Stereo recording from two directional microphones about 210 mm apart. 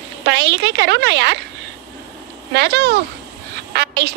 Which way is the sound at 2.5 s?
55° right (ahead or behind).